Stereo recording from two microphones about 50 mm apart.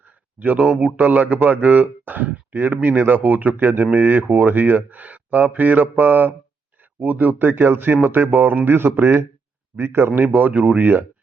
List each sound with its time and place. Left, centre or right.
0.3 s speech: right
0.6 s speech: centre
1.0 s a man's voice: right
10.3 s speech: right